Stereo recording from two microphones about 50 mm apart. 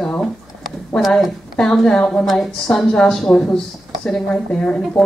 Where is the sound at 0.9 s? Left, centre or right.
Centre.